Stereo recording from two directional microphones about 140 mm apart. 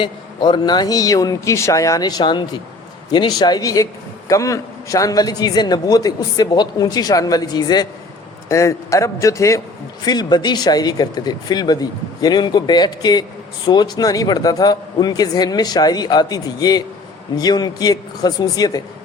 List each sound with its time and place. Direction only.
0.0 s a man's voice: 35° left (ahead or behind)